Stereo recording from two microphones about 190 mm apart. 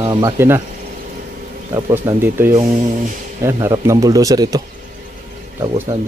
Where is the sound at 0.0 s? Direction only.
20° right (ahead or behind).